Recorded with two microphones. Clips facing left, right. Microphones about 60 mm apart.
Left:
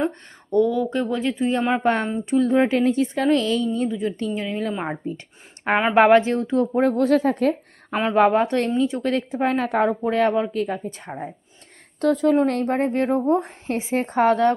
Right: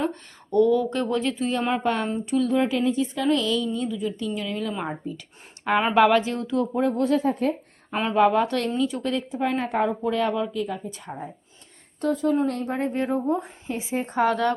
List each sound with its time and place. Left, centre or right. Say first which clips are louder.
0.5 s speech: even; centre
1.8 s a woman's voice: left 3 dB; left
6.8 s a woman's voice: left 3 dB; left
8.1 s a woman's voice: left 2 dB; left
9.0 s speech: left 4 dB; left
10.0 s a woman's voice: left 4 dB; left
11.9 s speech: left 5 dB; left
12.8 s a woman's voice: left 2 dB; left
13.1 s a woman's voice: left 5 dB; left
14.1 s a woman's voice: left 4 dB; left